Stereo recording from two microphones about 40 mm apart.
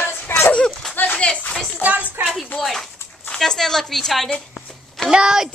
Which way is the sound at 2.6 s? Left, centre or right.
Centre.